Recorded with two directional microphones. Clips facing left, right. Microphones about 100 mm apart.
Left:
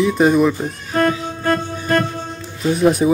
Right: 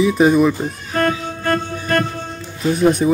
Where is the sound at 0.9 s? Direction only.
20° left (ahead or behind).